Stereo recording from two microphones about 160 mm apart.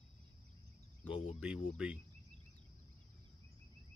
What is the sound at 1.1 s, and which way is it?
Speech, 35° left (ahead or behind).